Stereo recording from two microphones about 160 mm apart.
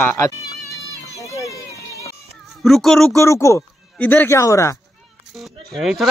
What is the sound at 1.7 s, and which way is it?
Music, 20° right (ahead or behind).